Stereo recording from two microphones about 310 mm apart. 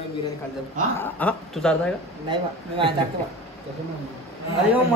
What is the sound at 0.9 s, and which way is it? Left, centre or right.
Speech, centre.